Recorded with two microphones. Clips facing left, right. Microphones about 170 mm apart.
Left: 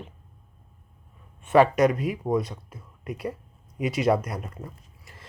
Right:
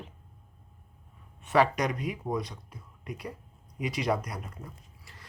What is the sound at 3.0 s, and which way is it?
Speech, 50° left (ahead or behind).